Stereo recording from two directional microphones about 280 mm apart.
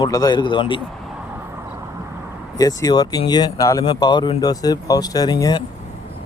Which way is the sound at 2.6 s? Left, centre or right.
Centre.